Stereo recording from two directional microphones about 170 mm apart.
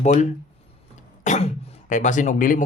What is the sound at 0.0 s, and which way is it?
Speech, 45° left (ahead or behind).